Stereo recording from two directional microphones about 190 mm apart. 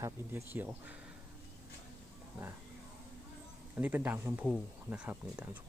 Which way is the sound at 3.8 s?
10° right (ahead or behind).